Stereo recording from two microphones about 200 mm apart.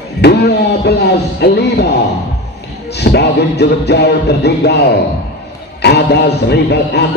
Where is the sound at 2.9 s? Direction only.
55° left (ahead or behind).